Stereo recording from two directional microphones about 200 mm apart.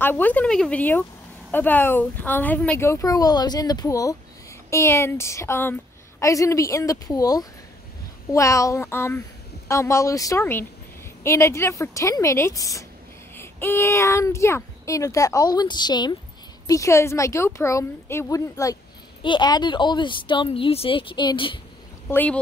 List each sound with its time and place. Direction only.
0.0 s a woman's voice: 10° left (ahead or behind)
22.1 s a woman's voice: 10° left (ahead or behind)